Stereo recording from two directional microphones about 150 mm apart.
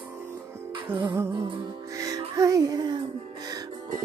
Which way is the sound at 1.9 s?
20° right (ahead or behind).